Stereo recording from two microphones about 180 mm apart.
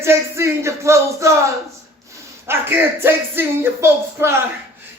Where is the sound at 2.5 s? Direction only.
10° right (ahead or behind).